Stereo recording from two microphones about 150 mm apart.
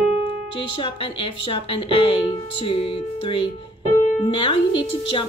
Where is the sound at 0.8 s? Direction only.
35° left (ahead or behind).